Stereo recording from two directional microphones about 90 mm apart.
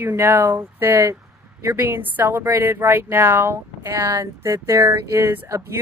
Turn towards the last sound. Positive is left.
turn(degrees=-30)  # may be behind; listen again after turning